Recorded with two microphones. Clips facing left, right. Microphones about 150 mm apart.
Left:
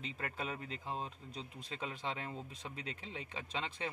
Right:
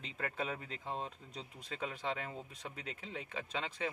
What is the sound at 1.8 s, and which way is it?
Speech, 25° left (ahead or behind).